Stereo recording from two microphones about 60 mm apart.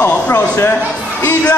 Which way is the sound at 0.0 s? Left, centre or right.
Left.